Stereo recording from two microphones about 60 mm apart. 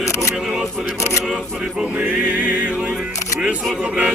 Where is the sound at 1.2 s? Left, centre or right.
Centre.